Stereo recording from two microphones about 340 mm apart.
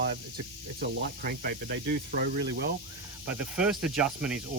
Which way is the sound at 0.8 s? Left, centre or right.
Right.